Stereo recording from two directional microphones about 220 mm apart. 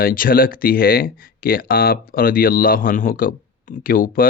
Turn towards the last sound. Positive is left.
turn(degrees=40)  # may be behind; listen again after turning